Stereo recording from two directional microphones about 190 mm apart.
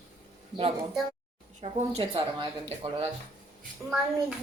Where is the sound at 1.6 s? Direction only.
35° right (ahead or behind).